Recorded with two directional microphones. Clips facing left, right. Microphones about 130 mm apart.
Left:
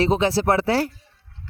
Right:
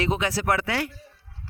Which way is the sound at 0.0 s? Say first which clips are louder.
Left 6 dB; 30° left (ahead or behind).